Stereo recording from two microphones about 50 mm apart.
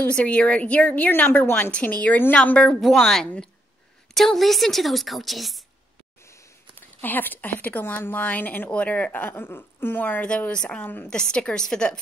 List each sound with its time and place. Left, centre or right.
0.1 s a woman's voice: left
2.8 s a woman's voice: centre
7.0 s a woman's voice: left
10.5 s a woman's voice: centre
10.8 s speech: left
11.1 s a woman's voice: centre